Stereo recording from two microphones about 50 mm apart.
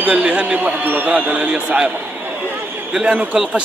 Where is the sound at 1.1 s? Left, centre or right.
Right.